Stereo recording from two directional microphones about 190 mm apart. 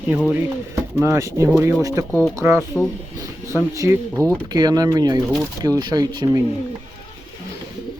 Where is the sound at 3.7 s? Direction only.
15° right (ahead or behind).